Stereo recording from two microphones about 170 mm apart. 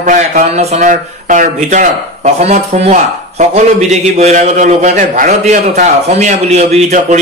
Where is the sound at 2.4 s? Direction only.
40° right (ahead or behind).